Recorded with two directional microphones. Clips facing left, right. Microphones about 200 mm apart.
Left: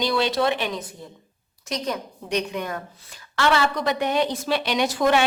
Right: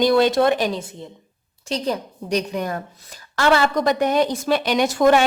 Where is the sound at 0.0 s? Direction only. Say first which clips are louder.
Right 6 dB; 50° right (ahead or behind).